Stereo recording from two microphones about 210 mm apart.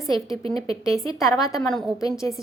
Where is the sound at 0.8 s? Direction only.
15° left (ahead or behind).